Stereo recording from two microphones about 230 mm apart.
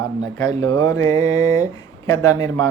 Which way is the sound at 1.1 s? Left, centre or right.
Centre.